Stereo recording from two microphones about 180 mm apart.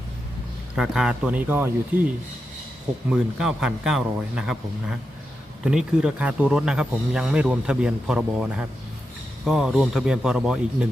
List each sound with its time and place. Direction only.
0.8 s speech: 5° right (ahead or behind)
3.1 s speech: 5° right (ahead or behind)